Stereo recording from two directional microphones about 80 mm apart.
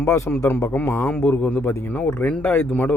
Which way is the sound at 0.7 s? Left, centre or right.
Left.